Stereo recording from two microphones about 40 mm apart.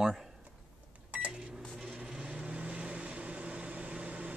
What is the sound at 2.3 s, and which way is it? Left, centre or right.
Vehicle, right.